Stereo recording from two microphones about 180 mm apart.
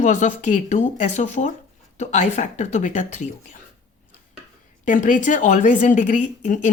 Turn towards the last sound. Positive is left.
turn(degrees=45)  # may be behind; listen again after turning